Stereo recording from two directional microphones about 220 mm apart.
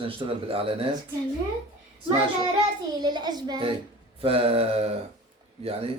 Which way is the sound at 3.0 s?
20° right (ahead or behind).